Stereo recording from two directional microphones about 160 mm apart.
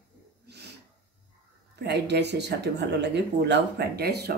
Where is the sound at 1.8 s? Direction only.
90° right.